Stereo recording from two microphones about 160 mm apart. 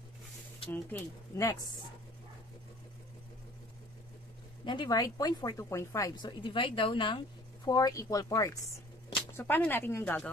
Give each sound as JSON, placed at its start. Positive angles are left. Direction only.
{"t": 0.7, "sound": "speech", "side_deg": 15}
{"t": 4.6, "sound": "speech", "side_deg": 25}